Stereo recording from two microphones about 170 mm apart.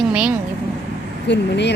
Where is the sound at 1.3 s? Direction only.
90° left.